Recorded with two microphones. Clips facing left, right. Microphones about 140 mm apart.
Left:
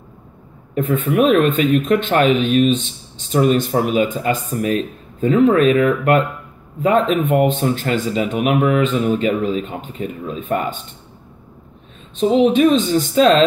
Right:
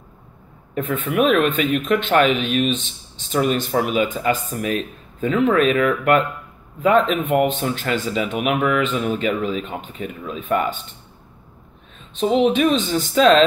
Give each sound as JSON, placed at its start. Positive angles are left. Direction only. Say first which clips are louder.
{"t": 0.7, "sound": "speech", "louder": "left 4 dB", "side_deg": 45}
{"t": 12.4, "sound": "speech", "louder": "left 4 dB", "side_deg": 40}